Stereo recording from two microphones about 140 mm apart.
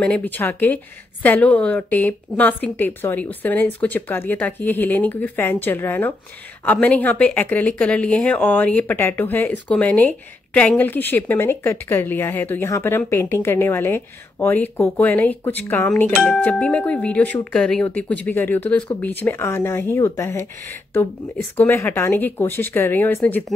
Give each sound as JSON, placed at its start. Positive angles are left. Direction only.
{"t": 0.0, "sound": "speech", "side_deg": 10}